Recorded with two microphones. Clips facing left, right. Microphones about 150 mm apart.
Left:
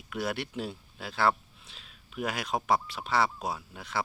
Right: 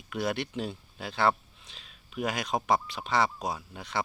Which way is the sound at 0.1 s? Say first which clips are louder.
Right 2 dB; 5° left (ahead or behind).